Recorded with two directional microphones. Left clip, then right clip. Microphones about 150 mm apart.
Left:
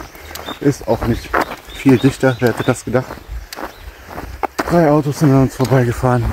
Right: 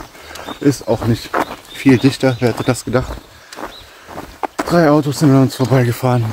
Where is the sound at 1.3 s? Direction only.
20° left (ahead or behind).